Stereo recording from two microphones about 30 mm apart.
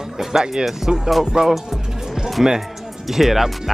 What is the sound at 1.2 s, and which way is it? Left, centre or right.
Music, centre.